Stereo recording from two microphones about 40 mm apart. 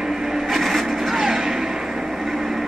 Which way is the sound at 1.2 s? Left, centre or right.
Centre.